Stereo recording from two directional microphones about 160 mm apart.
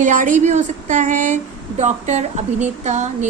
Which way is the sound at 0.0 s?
55° right (ahead or behind).